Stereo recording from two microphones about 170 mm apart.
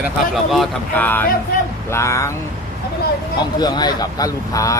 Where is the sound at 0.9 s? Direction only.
10° left (ahead or behind).